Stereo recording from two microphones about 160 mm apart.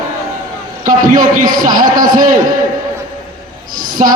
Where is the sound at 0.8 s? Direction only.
55° right (ahead or behind).